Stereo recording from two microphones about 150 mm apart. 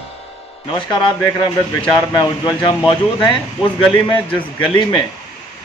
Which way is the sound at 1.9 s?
25° left (ahead or behind).